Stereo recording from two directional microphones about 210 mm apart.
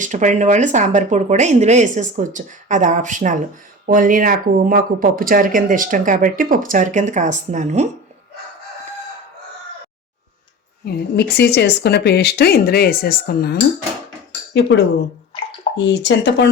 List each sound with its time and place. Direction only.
0.0 s speech: 35° right (ahead or behind)
10.8 s speech: 50° left (ahead or behind)
15.8 s speech: 55° left (ahead or behind)